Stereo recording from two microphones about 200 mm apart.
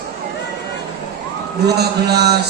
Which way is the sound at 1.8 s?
55° right (ahead or behind).